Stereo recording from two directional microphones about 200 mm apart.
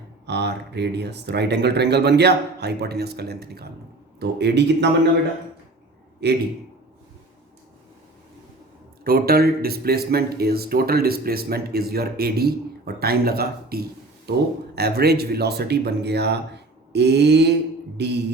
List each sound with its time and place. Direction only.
0.3 s speech: 55° right (ahead or behind)
6.2 s speech: 55° right (ahead or behind)
9.0 s speech: 50° right (ahead or behind)